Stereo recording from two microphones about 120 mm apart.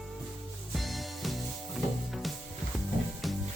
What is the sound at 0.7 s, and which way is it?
Music, centre (ahead or behind).